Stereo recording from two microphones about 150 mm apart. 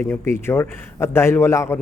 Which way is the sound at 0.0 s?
15° left (ahead or behind).